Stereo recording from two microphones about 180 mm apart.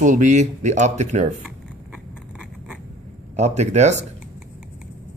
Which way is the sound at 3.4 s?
40° right (ahead or behind).